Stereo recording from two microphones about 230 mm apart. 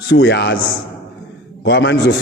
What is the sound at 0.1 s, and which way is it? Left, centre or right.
Speech, left.